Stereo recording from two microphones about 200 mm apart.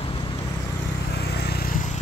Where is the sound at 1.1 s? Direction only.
55° left (ahead or behind).